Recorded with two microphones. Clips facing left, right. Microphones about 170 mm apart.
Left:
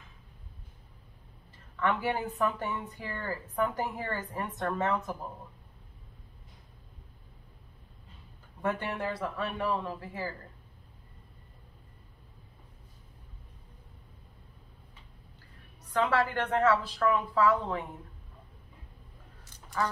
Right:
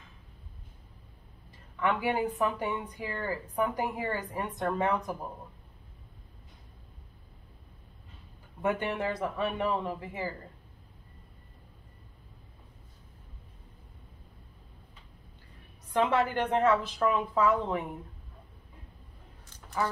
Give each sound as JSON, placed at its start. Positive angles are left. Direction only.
{"t": 1.8, "sound": "a woman's voice", "side_deg": -15}
{"t": 8.6, "sound": "a woman's voice", "side_deg": -15}
{"t": 15.9, "sound": "a woman's voice", "side_deg": -20}
{"t": 19.7, "sound": "a woman's voice", "side_deg": -15}